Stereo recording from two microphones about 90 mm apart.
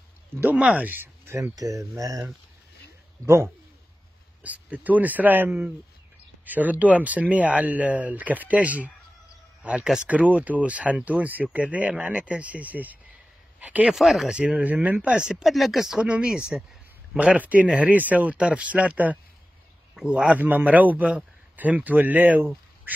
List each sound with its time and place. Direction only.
0.4 s speech: 15° right (ahead or behind); by 2.3 s 40° right (ahead or behind)
4.4 s speech: 15° right (ahead or behind)
13.9 s speech: centre (ahead or behind)
14.3 s speech: 15° right (ahead or behind)